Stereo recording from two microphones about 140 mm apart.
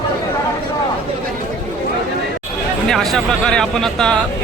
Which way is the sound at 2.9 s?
5° left (ahead or behind).